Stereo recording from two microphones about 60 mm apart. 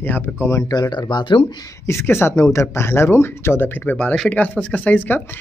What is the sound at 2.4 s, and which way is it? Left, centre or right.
Speech, left.